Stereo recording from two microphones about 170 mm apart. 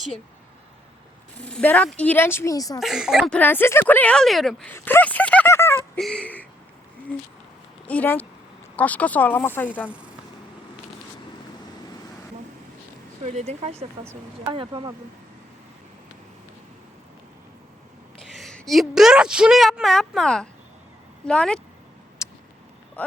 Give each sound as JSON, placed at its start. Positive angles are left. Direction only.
{"t": 1.4, "sound": "speech", "side_deg": 5}
{"t": 2.8, "sound": "a woman's voice", "side_deg": -5}
{"t": 3.3, "sound": "speech", "side_deg": 10}
{"t": 4.7, "sound": "a sound", "side_deg": 10}
{"t": 6.0, "sound": "a woman's voice", "side_deg": 5}
{"t": 7.9, "sound": "speech", "side_deg": 10}
{"t": 13.2, "sound": "speech", "side_deg": -40}
{"t": 14.4, "sound": "speech", "side_deg": -25}
{"t": 18.3, "sound": "a woman's voice", "side_deg": 0}
{"t": 22.2, "sound": "a sound", "side_deg": 20}
{"t": 23.0, "sound": "speech", "side_deg": 10}